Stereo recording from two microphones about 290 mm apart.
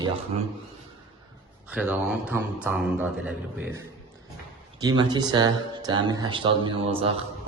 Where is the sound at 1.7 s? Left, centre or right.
Centre.